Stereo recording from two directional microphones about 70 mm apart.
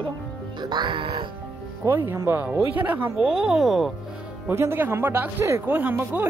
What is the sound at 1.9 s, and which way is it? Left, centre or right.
Speech, right.